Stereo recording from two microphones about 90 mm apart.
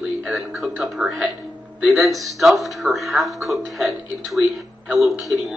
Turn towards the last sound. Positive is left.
turn(degrees=0)  # may be behind; listen again after turning